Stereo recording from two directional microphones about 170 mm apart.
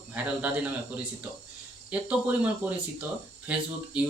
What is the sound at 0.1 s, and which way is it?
Speech, 10° right (ahead or behind).